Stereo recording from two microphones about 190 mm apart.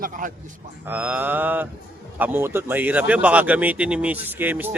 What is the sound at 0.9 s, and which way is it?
Speech, 10° right (ahead or behind).